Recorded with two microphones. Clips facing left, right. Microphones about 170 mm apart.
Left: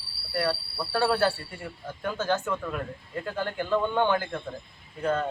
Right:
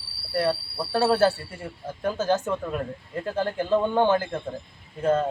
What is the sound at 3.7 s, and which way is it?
Speech, 25° right (ahead or behind).